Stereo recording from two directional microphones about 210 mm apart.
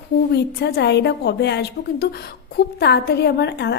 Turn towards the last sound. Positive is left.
turn(degrees=50)  # may be behind; listen again after turning